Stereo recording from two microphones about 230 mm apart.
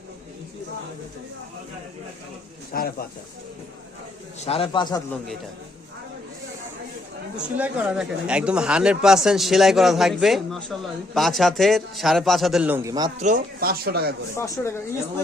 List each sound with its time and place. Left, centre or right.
2.7 s speech: left
4.4 s a man's voice: left
7.5 s speech: centre
13.1 s speech: right
14.3 s speech: centre